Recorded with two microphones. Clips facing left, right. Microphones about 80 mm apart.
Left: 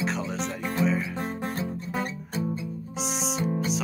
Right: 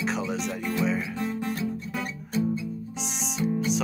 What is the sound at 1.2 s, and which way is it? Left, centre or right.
Music, left.